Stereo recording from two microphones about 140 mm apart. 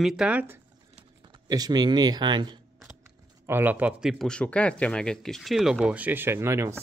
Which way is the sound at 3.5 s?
15° right (ahead or behind).